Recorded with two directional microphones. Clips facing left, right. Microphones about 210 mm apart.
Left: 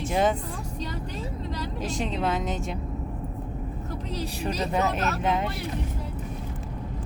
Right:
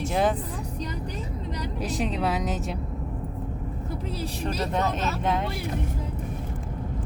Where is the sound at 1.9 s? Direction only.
5° right (ahead or behind).